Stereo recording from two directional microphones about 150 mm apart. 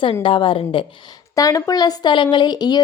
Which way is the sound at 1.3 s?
25° left (ahead or behind).